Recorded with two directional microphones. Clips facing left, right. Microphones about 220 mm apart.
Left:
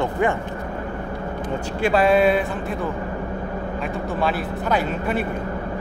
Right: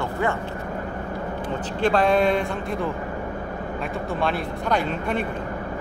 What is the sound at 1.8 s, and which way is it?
A man's voice, 5° left (ahead or behind).